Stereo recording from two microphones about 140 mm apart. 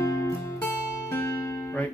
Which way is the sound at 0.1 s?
20° left (ahead or behind).